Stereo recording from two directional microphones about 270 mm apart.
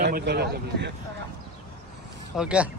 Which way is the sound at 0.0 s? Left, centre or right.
Right.